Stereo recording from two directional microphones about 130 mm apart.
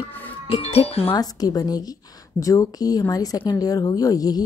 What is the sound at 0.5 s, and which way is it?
Speech, 55° left (ahead or behind).